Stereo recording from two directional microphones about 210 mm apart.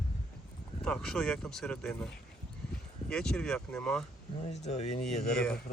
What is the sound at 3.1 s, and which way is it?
Speech, 5° left (ahead or behind).